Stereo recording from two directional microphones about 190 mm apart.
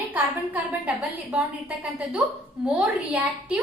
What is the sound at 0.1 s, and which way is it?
A woman's voice, 10° right (ahead or behind).